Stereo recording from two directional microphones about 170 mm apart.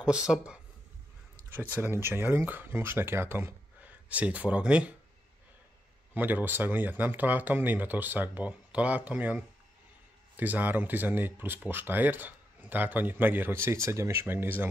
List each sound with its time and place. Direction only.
0.0 s speech: 5° right (ahead or behind)
6.1 s speech: 10° right (ahead or behind)